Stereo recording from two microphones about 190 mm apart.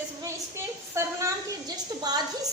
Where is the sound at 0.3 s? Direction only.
15° right (ahead or behind).